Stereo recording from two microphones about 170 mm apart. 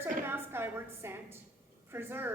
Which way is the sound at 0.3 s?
15° right (ahead or behind).